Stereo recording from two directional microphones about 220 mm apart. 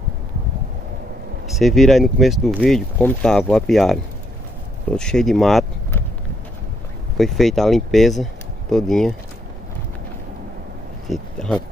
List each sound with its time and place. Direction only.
1.5 s speech: centre (ahead or behind)
7.2 s speech: centre (ahead or behind)
11.1 s a sound: 5° left (ahead or behind)